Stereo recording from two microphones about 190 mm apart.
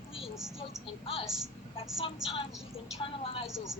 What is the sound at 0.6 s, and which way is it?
Speech, 30° left (ahead or behind).